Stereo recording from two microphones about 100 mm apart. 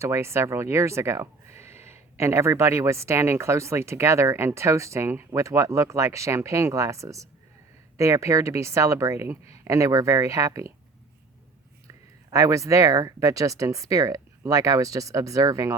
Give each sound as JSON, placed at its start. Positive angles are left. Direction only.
{"t": 0.0, "sound": "speech", "side_deg": -25}
{"t": 12.3, "sound": "speech", "side_deg": -30}